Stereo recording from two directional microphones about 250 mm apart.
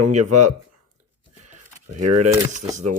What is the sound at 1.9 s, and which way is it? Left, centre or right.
Speech, right.